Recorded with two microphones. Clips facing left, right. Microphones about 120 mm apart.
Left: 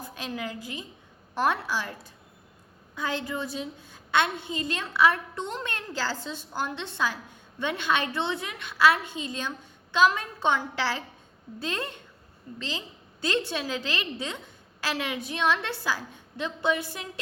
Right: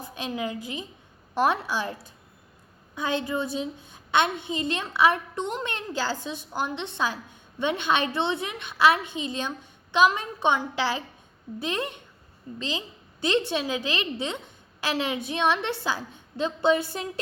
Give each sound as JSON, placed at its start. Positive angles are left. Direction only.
{"t": 0.0, "sound": "a woman's voice", "side_deg": -20}